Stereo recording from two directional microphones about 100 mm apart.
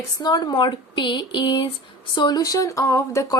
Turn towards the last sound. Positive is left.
turn(degrees=30)  # may be behind; listen again after turning